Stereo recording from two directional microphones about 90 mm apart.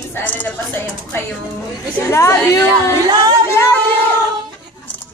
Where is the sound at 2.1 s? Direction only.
30° left (ahead or behind).